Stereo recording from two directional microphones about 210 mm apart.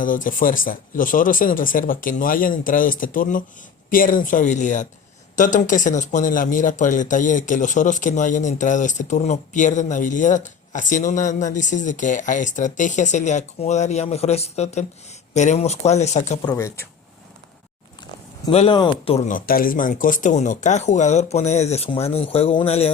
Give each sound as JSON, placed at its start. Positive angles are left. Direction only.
{"t": 0.0, "sound": "speech", "side_deg": 40}
{"t": 16.5, "sound": "speech", "side_deg": 15}
{"t": 18.5, "sound": "speech", "side_deg": 25}